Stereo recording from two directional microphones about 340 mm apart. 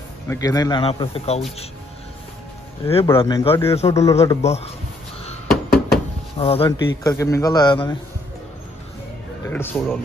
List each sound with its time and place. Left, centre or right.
0.3 s a man's voice: centre
2.9 s a man's voice: centre
5.2 s a sound: centre
6.4 s a man's voice: centre
9.5 s a man's voice: centre